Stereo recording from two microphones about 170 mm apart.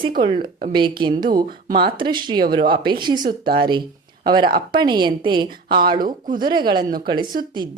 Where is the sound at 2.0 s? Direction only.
25° right (ahead or behind).